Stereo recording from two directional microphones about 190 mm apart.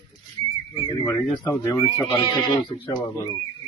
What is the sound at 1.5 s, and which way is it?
Speech, 15° left (ahead or behind).